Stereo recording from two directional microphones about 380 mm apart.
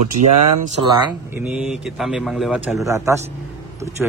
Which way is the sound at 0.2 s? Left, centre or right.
Right.